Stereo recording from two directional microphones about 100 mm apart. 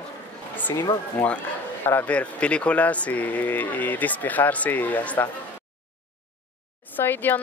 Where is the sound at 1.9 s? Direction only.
15° left (ahead or behind).